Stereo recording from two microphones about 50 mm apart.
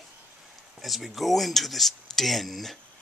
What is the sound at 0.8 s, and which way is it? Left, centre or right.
Speech, centre.